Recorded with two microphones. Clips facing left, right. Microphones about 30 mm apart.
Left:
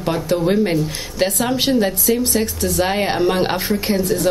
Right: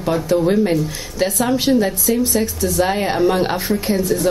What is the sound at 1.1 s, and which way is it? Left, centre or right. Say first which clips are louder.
Speech: right 1 dB; left.